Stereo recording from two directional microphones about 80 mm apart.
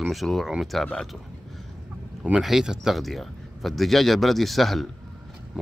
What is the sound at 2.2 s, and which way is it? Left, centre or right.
Speech, centre.